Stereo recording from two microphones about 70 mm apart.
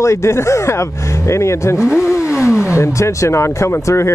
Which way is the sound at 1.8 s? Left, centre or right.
Centre.